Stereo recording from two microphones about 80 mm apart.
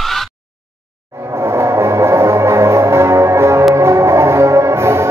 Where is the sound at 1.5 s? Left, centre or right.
Right.